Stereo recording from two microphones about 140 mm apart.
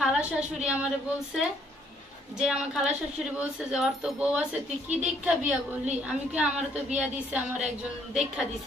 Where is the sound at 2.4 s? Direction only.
5° right (ahead or behind).